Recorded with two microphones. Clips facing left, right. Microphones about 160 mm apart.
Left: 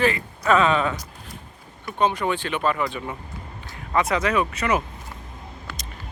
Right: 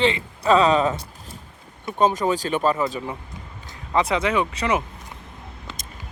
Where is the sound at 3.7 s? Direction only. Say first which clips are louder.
Right 1 dB; 25° right (ahead or behind).